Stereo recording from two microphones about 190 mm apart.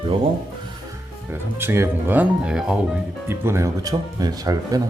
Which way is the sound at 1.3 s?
10° right (ahead or behind).